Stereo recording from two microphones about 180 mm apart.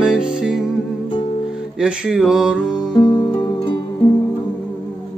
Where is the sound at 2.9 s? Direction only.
20° left (ahead or behind).